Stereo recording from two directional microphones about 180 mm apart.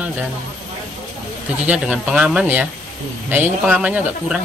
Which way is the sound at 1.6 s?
5° right (ahead or behind).